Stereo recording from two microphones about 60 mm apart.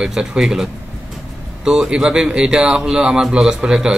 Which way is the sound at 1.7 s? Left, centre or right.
Centre.